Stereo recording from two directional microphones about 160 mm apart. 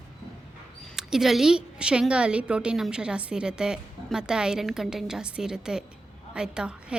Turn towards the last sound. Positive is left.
turn(degrees=-5)  # may be behind; listen again after turning